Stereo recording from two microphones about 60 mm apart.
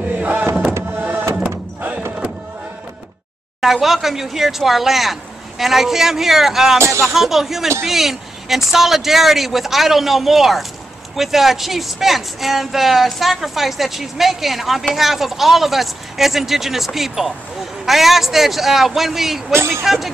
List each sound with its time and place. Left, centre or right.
0.2 s a sound: right
3.6 s speech: centre
19.5 s speech: right
19.8 s speech: centre